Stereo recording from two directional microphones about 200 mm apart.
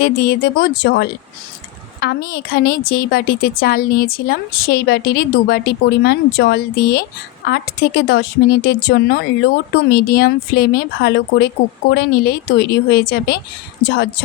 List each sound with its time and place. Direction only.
0.0 s a woman's voice: 50° left (ahead or behind)